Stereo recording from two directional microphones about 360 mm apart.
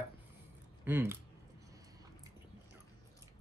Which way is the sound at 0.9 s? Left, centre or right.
Centre.